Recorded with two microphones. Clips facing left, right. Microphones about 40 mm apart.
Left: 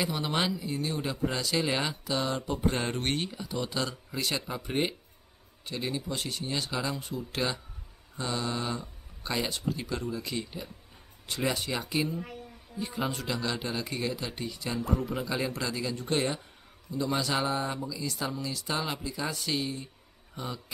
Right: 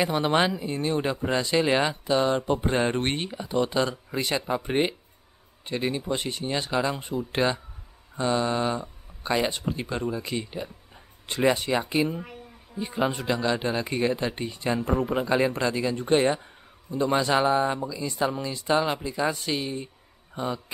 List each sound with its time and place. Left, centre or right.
0.0 s speech: right